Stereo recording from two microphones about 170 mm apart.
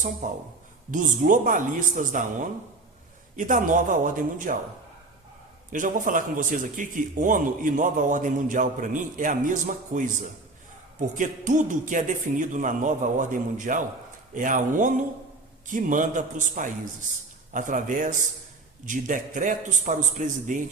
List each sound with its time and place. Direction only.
0.2 s a man's voice: 50° right (ahead or behind)
5.7 s a man's voice: 50° right (ahead or behind)
11.1 s a man's voice: 50° right (ahead or behind)